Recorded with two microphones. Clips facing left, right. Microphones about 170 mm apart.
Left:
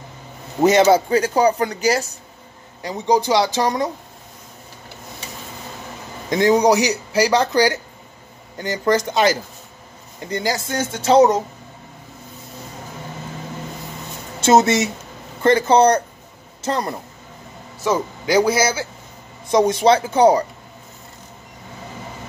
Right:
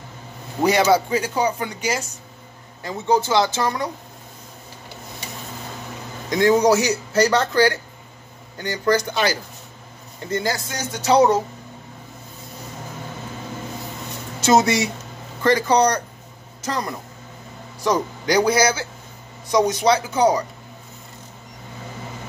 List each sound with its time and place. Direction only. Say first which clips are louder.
0.6 s speech: left 4 dB; 20° left (ahead or behind)
1.1 s speech: left 5 dB; 40° left (ahead or behind)
2.8 s speech: left 2 dB; 15° left (ahead or behind)
6.3 s speech: left 1 dB; 20° left (ahead or behind)
14.4 s speech: left 2 dB; 25° left (ahead or behind)
17.7 s speech: left 1 dB; 5° left (ahead or behind)
19.5 s speech: left 3 dB; 25° left (ahead or behind)